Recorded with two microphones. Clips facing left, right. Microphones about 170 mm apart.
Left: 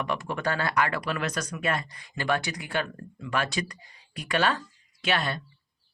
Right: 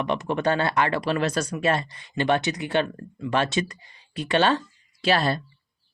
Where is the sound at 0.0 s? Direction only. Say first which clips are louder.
Right 5 dB; 20° right (ahead or behind).